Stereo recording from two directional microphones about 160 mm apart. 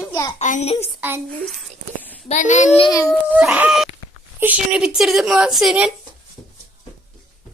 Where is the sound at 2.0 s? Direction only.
10° left (ahead or behind).